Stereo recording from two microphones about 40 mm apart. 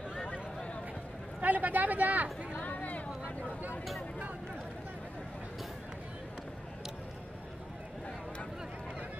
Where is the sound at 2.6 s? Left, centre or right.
Left.